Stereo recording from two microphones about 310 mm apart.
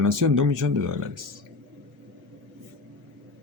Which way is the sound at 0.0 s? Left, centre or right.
Right.